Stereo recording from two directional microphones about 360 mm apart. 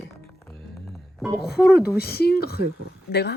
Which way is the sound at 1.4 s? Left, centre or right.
Left.